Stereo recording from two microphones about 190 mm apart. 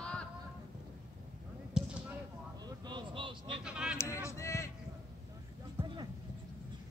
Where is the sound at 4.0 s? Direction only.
15° left (ahead or behind).